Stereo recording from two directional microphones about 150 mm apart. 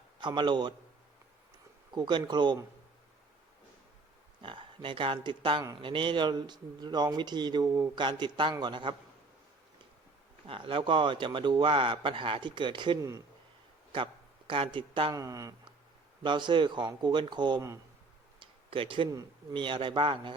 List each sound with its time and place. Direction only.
0.2 s a man's voice: 30° right (ahead or behind)
1.9 s a man's voice: 30° right (ahead or behind)
4.4 s a man's voice: 35° right (ahead or behind)
10.4 s a man's voice: 35° right (ahead or behind)
13.9 s a man's voice: 35° right (ahead or behind)
15.1 s a man's voice: 20° right (ahead or behind)
18.3 s tick-tock: 35° right (ahead or behind)
19.1 s a man's voice: 30° right (ahead or behind)